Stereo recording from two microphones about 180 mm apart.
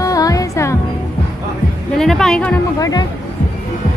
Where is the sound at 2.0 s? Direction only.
Centre (ahead or behind).